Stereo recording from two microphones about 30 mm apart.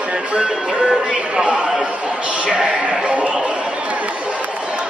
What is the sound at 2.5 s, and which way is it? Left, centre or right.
Bleat, right.